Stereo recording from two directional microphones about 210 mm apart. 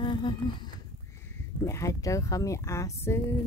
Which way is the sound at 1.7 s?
15° left (ahead or behind).